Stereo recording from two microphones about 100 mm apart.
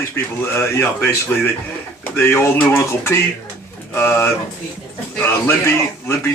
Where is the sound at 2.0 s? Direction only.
20° left (ahead or behind).